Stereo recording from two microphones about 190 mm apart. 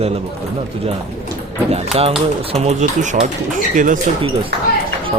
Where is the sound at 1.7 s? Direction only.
35° right (ahead or behind).